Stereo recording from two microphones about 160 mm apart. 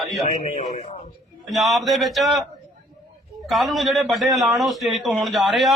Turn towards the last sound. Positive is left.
turn(degrees=0)  # may be behind; listen again after turning